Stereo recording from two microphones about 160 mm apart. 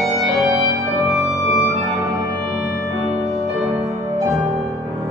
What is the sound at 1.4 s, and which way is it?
Organ, centre (ahead or behind).